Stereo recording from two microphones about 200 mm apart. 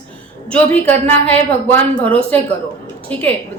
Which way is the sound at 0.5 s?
10° left (ahead or behind).